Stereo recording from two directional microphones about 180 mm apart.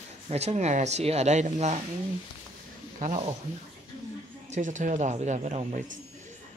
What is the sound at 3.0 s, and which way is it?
Speech, 40° right (ahead or behind).